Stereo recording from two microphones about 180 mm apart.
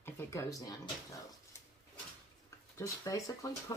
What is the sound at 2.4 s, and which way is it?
Speech, 20° left (ahead or behind).